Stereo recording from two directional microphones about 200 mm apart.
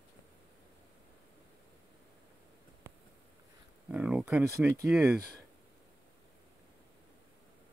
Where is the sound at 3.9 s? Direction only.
5° right (ahead or behind).